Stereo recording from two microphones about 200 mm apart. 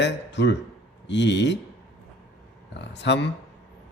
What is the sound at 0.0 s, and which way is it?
A man's voice, 60° left (ahead or behind).